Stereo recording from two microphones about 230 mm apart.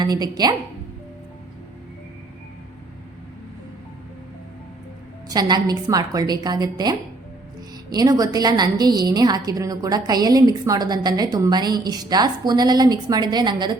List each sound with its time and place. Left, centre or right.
0.0 s a woman's voice: centre
5.3 s a woman's voice: centre